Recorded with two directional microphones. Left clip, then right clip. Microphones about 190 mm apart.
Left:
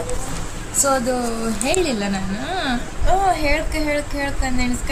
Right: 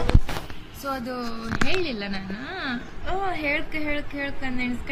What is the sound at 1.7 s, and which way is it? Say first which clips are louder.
Speech: left 7 dB; 5° left (ahead or behind).